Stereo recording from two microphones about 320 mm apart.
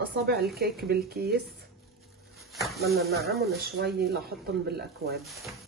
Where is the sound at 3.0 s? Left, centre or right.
Right.